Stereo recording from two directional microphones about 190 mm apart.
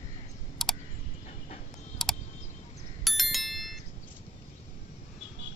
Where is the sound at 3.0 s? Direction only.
Centre (ahead or behind).